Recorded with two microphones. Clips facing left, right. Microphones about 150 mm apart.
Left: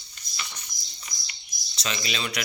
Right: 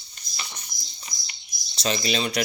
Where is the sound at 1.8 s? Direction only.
35° right (ahead or behind).